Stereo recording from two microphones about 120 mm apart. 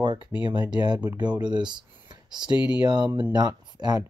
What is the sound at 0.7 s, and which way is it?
Speech, 35° right (ahead or behind).